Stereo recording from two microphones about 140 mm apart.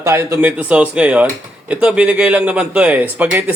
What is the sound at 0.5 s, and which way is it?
Speech, 10° right (ahead or behind).